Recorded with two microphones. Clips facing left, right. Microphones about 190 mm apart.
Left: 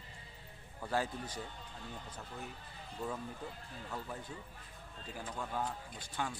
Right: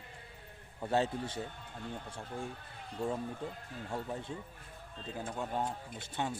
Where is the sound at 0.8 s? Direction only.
25° right (ahead or behind).